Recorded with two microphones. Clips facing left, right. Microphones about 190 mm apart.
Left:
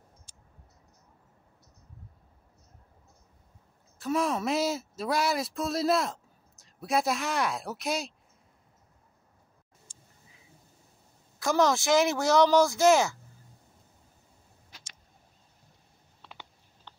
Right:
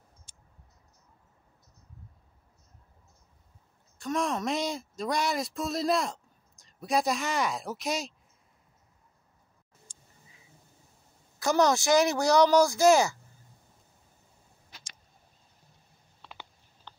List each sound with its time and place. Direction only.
0.3 s a sound: 55° right (ahead or behind)
4.0 s speech: 5° left (ahead or behind)
11.3 s speech: centre (ahead or behind)